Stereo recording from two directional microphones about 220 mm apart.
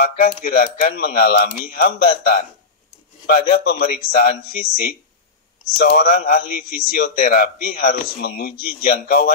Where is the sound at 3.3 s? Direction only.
40° left (ahead or behind).